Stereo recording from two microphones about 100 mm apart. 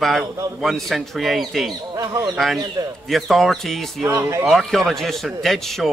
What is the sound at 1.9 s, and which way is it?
Speech, 35° right (ahead or behind).